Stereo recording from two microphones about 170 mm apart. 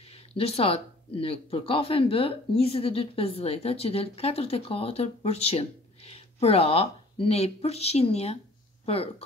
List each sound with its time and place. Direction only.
0.4 s speech: 35° left (ahead or behind)